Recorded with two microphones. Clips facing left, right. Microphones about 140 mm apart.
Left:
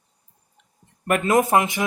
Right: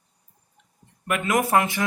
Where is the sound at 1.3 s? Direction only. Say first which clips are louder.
Left 2 dB; 20° left (ahead or behind).